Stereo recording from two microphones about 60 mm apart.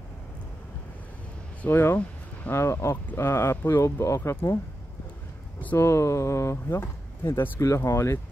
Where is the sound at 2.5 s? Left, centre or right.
Left.